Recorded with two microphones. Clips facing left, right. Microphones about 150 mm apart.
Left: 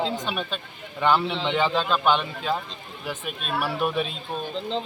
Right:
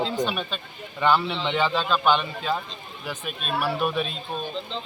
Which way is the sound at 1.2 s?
Centre (ahead or behind).